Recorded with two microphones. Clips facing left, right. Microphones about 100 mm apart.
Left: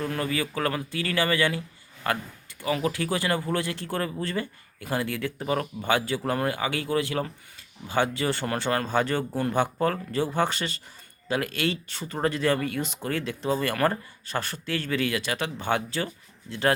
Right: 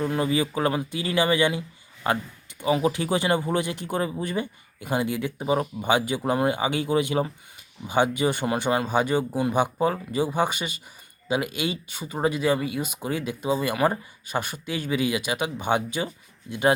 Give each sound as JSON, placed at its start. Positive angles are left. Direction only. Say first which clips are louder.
{"t": 0.0, "sound": "speech", "louder": "right 4 dB", "side_deg": -20}